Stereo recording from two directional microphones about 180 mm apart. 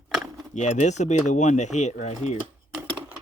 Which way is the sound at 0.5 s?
40° left (ahead or behind).